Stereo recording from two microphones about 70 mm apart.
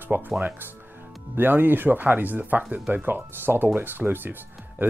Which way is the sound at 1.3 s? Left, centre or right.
Right.